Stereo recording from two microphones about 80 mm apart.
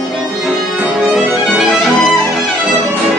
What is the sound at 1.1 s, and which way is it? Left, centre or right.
Music, centre.